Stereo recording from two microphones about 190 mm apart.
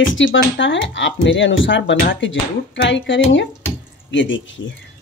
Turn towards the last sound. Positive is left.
turn(degrees=80)